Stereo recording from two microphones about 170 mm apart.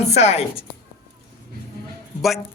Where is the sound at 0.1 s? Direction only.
40° left (ahead or behind).